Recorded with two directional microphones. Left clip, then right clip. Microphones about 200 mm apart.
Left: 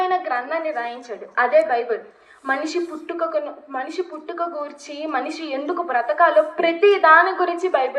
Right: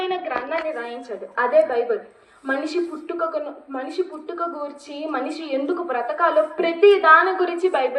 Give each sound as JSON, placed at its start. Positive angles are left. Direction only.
{"t": 0.0, "sound": "a woman's voice", "side_deg": 35}